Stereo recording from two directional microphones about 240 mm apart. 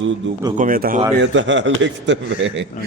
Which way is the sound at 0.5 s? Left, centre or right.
Right.